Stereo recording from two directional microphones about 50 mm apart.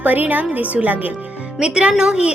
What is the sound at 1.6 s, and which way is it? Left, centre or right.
Speech, centre.